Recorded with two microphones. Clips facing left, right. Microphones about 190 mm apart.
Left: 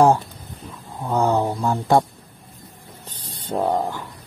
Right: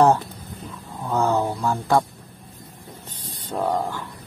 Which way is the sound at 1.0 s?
15° left (ahead or behind).